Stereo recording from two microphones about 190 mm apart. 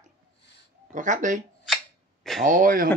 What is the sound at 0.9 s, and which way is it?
Speech, 40° right (ahead or behind).